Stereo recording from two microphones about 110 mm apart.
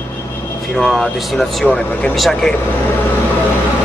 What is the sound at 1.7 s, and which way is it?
Speech, 15° left (ahead or behind).